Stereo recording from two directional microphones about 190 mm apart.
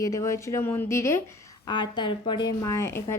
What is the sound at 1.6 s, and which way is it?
Speech, 25° left (ahead or behind).